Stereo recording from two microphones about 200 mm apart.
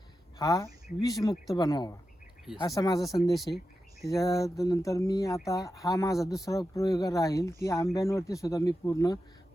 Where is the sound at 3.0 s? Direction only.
Centre (ahead or behind).